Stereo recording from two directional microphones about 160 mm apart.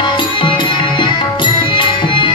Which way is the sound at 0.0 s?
30° left (ahead or behind).